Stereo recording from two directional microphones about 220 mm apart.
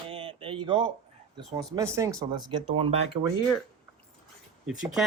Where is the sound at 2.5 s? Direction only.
25° right (ahead or behind).